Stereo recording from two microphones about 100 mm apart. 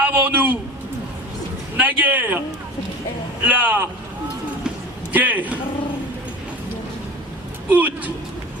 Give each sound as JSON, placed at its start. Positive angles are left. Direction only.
{"t": 0.0, "sound": "a sound", "side_deg": -15}
{"t": 1.8, "sound": "a man's voice", "side_deg": -15}
{"t": 3.4, "sound": "a man's voice", "side_deg": -15}
{"t": 5.1, "sound": "a man's voice", "side_deg": -15}
{"t": 7.7, "sound": "a man's voice", "side_deg": -15}